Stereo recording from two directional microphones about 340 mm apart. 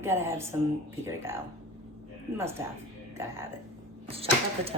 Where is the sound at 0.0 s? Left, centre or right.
Centre.